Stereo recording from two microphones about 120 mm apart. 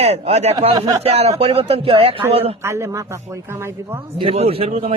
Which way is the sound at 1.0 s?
60° right (ahead or behind).